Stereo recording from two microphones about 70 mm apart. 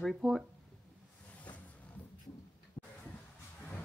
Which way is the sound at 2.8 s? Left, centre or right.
Left.